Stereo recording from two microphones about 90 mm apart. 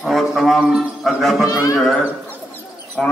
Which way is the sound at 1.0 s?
Centre (ahead or behind).